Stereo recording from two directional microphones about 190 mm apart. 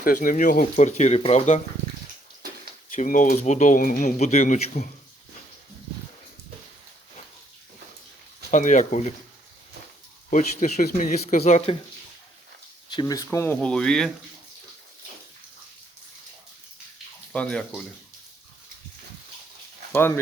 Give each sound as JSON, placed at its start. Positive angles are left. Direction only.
{"t": 0.0, "sound": "speech", "side_deg": 45}
{"t": 2.9, "sound": "speech", "side_deg": 45}
{"t": 8.4, "sound": "speech", "side_deg": 40}
{"t": 10.2, "sound": "speech", "side_deg": 40}
{"t": 12.9, "sound": "speech", "side_deg": 20}
{"t": 17.3, "sound": "speech", "side_deg": 5}
{"t": 19.9, "sound": "speech", "side_deg": 10}